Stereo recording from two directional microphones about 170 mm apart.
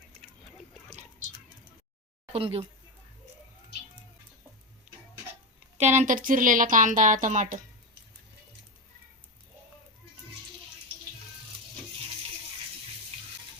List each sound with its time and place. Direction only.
2.3 s speech: 35° right (ahead or behind)
5.7 s speech: 45° right (ahead or behind)